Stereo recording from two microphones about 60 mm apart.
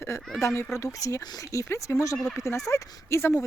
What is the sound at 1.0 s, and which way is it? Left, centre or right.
Speech, left.